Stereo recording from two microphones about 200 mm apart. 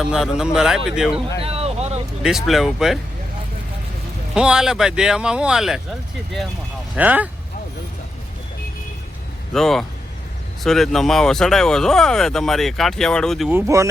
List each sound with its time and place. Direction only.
0.0 s speech: 5° right (ahead or behind)
1.4 s vehicle: 30° right (ahead or behind)
2.2 s speech: centre (ahead or behind)
4.4 s speech: 5° right (ahead or behind)
6.9 s speech: 10° right (ahead or behind)
9.5 s speech: centre (ahead or behind)
13.5 s speech: 15° right (ahead or behind)